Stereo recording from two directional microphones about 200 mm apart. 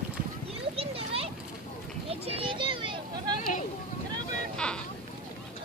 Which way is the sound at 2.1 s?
30° right (ahead or behind).